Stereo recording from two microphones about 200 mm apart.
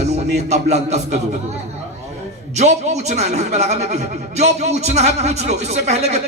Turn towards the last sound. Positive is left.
turn(degrees=-35)  # may be behind; listen again after turning